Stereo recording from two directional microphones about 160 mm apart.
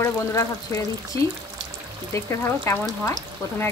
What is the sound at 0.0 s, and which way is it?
Speech, 15° left (ahead or behind).